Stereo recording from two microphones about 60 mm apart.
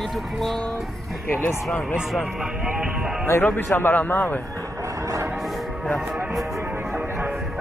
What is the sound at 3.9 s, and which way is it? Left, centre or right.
Speech, left.